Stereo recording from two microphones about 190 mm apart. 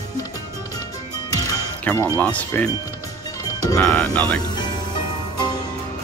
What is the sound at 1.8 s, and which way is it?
Speech, 10° left (ahead or behind).